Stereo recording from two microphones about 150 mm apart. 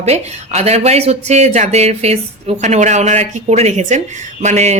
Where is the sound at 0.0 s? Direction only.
45° right (ahead or behind).